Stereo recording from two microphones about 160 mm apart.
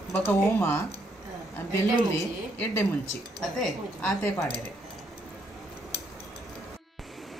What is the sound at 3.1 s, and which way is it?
Speech, centre (ahead or behind).